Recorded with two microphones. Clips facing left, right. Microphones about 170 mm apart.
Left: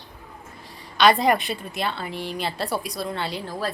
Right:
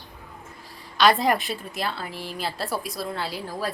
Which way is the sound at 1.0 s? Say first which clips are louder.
Left 2 dB; centre (ahead or behind).